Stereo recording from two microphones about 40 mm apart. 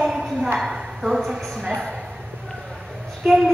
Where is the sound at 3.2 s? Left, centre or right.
Centre.